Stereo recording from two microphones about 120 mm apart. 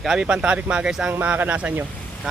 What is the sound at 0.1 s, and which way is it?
Speech, 5° right (ahead or behind).